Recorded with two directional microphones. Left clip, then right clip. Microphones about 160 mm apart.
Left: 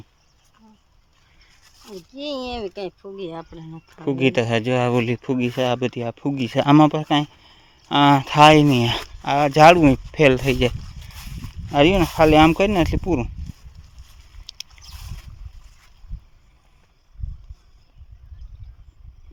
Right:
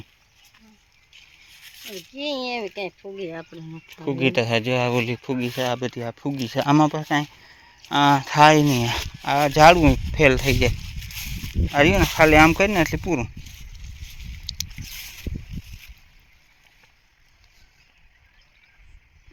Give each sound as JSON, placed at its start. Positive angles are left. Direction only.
{"t": 2.7, "sound": "speech", "side_deg": 70}
{"t": 3.2, "sound": "speech", "side_deg": 40}
{"t": 3.6, "sound": "speech", "side_deg": 0}
{"t": 4.0, "sound": "speech", "side_deg": 35}
{"t": 14.5, "sound": "a sound", "side_deg": 20}